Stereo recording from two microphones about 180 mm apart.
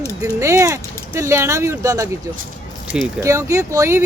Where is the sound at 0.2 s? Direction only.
15° right (ahead or behind).